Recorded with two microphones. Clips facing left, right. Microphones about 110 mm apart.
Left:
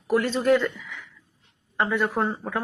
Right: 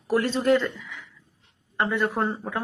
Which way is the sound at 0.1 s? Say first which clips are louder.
Left 1 dB; centre (ahead or behind).